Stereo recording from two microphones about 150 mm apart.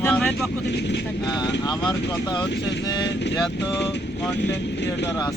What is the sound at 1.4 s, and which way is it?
Speech, 25° left (ahead or behind).